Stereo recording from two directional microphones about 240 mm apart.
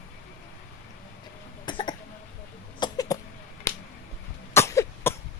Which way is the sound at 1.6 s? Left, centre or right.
Centre.